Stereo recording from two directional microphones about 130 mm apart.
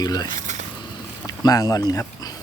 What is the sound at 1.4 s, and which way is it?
Speech, 30° left (ahead or behind).